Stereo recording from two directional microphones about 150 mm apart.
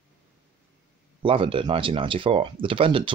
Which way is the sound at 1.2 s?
35° right (ahead or behind).